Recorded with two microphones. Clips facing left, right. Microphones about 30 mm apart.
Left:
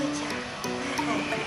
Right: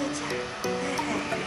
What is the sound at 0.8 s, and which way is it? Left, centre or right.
Speech, centre.